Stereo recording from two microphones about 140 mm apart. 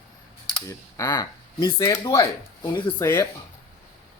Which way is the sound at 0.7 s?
25° left (ahead or behind).